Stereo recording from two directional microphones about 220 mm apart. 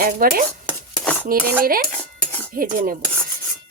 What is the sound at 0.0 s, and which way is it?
Speech, 40° right (ahead or behind).